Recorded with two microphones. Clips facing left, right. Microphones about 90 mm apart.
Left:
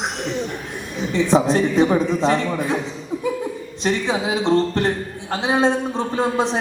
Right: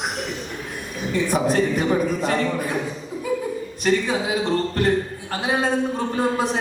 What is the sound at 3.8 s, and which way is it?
Speech, 25° left (ahead or behind).